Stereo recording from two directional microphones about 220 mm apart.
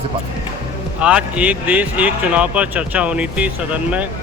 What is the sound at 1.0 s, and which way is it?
Speech, 5° right (ahead or behind).